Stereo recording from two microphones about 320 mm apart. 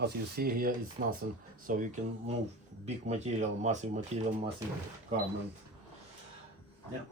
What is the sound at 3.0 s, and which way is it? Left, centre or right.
Speech, right.